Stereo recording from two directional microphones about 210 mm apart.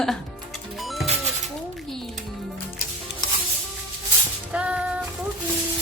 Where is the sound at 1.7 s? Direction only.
Centre (ahead or behind).